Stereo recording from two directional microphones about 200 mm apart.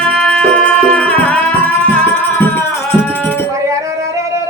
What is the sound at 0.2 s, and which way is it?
Music, 5° left (ahead or behind).